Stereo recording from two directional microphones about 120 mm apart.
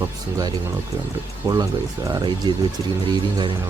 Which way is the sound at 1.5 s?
30° right (ahead or behind).